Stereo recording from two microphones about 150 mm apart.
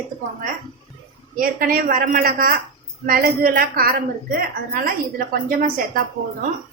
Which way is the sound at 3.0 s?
75° right (ahead or behind).